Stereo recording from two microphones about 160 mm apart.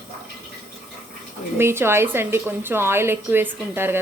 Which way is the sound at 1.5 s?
15° right (ahead or behind).